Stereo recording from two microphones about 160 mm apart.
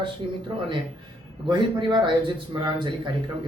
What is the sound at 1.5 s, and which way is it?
Speech, 30° right (ahead or behind).